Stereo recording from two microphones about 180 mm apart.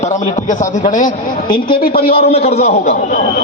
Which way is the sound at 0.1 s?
45° left (ahead or behind).